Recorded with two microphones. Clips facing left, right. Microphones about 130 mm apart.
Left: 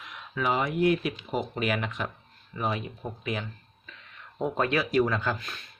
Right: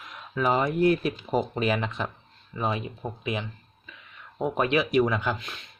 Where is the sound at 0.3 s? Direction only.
40° right (ahead or behind); by 3.5 s 20° right (ahead or behind).